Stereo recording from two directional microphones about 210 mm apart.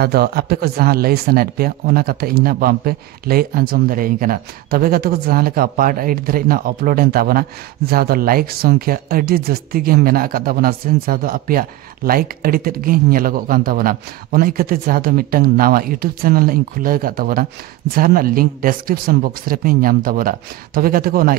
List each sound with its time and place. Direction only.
0.0 s a man's voice: 45° right (ahead or behind)